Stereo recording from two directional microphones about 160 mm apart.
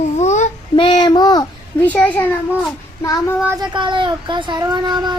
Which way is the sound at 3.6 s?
30° right (ahead or behind).